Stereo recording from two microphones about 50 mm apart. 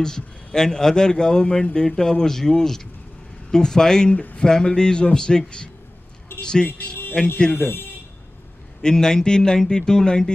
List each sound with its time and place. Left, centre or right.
0.0 s a man's voice: centre
4.1 s speech: left
4.4 s a man's voice: centre
6.4 s speech: centre
7.5 s speech: left
8.8 s a man's voice: centre